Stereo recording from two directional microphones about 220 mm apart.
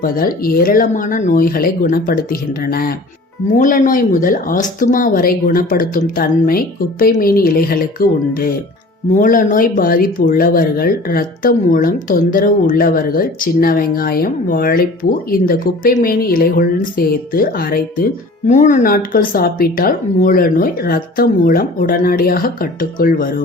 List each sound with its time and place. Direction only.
0.0 s speech: 40° left (ahead or behind)